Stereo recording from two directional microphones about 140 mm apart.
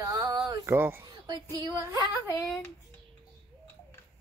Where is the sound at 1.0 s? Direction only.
30° right (ahead or behind).